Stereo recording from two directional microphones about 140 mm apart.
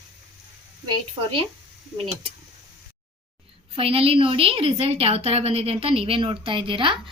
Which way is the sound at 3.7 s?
40° right (ahead or behind).